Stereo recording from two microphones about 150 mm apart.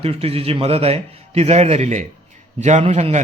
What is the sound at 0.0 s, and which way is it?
A man's voice, 40° right (ahead or behind).